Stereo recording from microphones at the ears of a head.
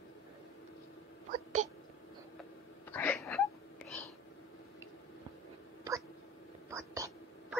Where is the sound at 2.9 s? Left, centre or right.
Left.